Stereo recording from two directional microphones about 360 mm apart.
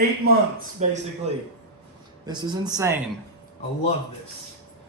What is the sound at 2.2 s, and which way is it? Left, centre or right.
Speech, centre.